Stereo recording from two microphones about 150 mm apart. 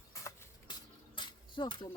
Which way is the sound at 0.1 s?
20° left (ahead or behind).